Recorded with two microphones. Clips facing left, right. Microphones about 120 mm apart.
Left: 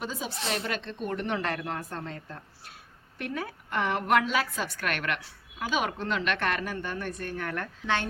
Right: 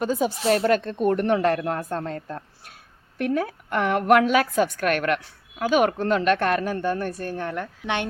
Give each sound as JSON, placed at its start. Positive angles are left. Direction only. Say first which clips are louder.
{"t": 0.0, "sound": "a woman's voice", "louder": "right 11 dB", "side_deg": -50}
{"t": 7.5, "sound": "a woman's voice", "louder": "right 3 dB", "side_deg": -20}